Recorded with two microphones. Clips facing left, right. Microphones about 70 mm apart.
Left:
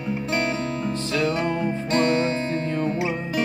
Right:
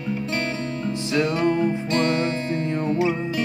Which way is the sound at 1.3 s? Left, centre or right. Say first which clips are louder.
Right 3 dB; left.